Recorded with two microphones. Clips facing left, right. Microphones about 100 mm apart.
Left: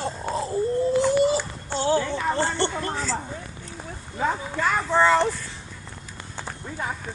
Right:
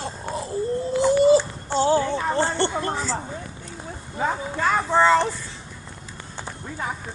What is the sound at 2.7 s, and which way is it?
Speech, 10° right (ahead or behind).